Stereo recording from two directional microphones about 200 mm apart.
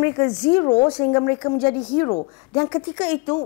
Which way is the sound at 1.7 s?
20° left (ahead or behind).